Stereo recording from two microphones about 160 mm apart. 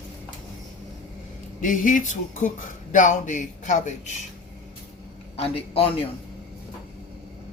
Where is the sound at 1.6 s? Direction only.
55° left (ahead or behind).